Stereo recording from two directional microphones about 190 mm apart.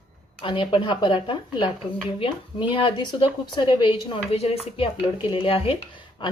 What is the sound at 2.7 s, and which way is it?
A woman's voice, 25° left (ahead or behind).